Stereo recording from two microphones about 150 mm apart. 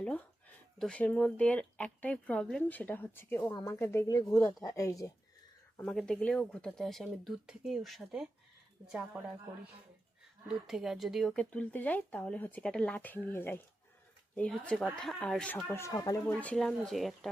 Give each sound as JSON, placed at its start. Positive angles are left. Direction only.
{"t": 0.8, "sound": "speech", "side_deg": 5}
{"t": 5.7, "sound": "speech", "side_deg": 5}
{"t": 10.5, "sound": "speech", "side_deg": -5}
{"t": 15.6, "sound": "speech", "side_deg": 20}
{"t": 16.2, "sound": "speech", "side_deg": 10}